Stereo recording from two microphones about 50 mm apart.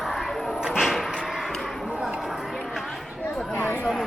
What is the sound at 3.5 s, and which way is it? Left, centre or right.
Chatter, left.